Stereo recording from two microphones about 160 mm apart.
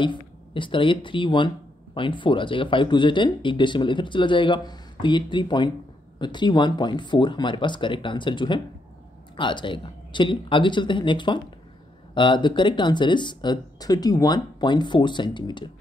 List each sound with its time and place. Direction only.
0.0 s speech: 30° left (ahead or behind)